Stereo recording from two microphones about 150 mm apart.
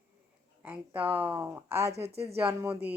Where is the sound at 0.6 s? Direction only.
10° right (ahead or behind).